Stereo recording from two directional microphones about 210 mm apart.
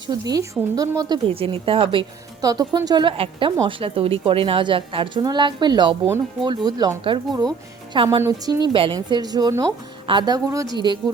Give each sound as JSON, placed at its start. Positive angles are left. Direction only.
{"t": 0.1, "sound": "a woman's voice", "side_deg": -20}